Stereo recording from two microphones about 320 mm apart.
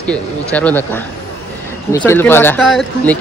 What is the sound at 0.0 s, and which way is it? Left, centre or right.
Speech, centre.